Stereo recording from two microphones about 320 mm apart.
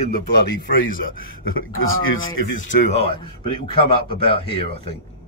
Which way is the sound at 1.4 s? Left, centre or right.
Left.